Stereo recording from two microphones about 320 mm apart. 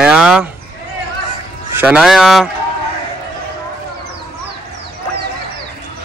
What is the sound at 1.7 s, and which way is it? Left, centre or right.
Speech, centre.